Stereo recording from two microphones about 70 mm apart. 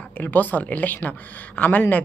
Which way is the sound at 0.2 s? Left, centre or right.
Left.